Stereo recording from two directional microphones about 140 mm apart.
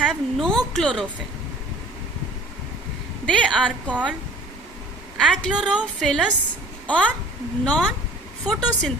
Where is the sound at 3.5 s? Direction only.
10° left (ahead or behind).